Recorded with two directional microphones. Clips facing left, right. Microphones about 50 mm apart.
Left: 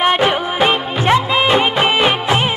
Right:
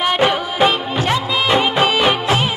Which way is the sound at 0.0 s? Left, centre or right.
Left.